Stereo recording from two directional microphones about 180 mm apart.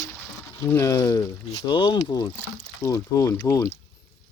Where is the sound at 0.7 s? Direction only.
15° left (ahead or behind).